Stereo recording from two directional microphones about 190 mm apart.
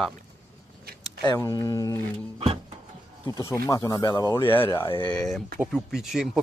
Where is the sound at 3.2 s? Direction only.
20° left (ahead or behind).